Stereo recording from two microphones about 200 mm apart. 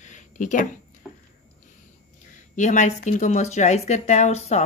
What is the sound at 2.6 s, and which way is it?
Speech, 35° left (ahead or behind).